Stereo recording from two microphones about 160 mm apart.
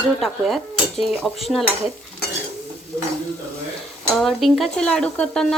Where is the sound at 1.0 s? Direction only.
Centre (ahead or behind).